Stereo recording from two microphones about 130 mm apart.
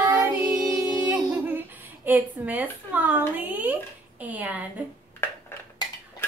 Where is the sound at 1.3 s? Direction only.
15° right (ahead or behind).